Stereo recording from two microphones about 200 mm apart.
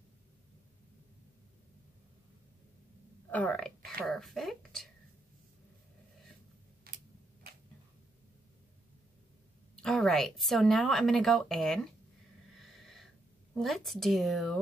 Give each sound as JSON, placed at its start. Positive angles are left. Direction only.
{"t": 3.3, "sound": "speech", "side_deg": 5}
{"t": 6.8, "sound": "tick-tock", "side_deg": -45}
{"t": 9.8, "sound": "speech", "side_deg": 5}
{"t": 12.7, "sound": "a sound", "side_deg": 0}
{"t": 13.6, "sound": "speech", "side_deg": 0}